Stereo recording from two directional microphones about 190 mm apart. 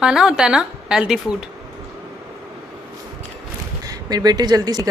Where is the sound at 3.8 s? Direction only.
20° right (ahead or behind).